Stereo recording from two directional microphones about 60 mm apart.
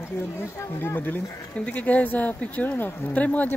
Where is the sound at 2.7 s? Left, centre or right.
Left.